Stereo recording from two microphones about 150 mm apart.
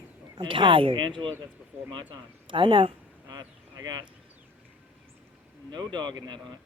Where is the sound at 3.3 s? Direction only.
25° right (ahead or behind).